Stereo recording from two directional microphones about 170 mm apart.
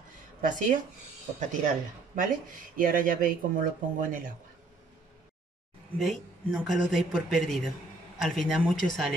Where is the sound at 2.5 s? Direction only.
55° right (ahead or behind).